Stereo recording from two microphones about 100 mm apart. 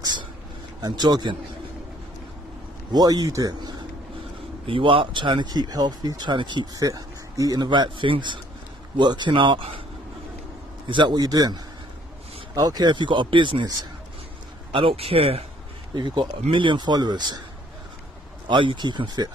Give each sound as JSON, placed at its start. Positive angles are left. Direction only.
{"t": 0.0, "sound": "a sound", "side_deg": -45}
{"t": 0.7, "sound": "speech", "side_deg": -45}
{"t": 2.9, "sound": "speech", "side_deg": -40}
{"t": 4.6, "sound": "speech", "side_deg": -60}
{"t": 10.9, "sound": "speech", "side_deg": -50}
{"t": 14.7, "sound": "speech", "side_deg": -65}
{"t": 15.9, "sound": "speech", "side_deg": -55}
{"t": 18.5, "sound": "speech", "side_deg": -55}